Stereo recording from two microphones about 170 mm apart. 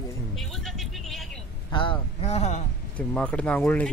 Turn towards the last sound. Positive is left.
turn(degrees=5)  # may be behind; listen again after turning